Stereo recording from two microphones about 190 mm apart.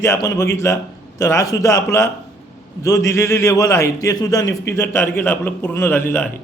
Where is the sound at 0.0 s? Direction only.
15° left (ahead or behind).